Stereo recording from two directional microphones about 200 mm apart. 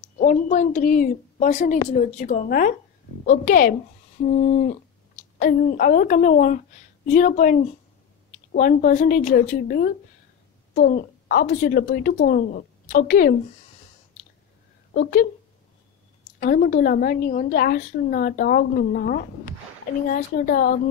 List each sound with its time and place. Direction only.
0.2 s a woman's voice: 40° left (ahead or behind)
15.0 s a woman's voice: 50° left (ahead or behind)
16.3 s a woman's voice: 45° left (ahead or behind)